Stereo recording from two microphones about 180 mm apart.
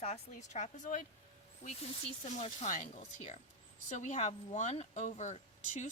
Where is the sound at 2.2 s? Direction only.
40° left (ahead or behind).